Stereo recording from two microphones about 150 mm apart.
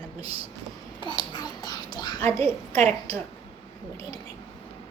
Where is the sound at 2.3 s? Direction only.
45° right (ahead or behind).